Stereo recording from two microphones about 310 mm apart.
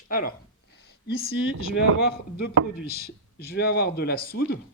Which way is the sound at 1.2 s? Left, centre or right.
Left.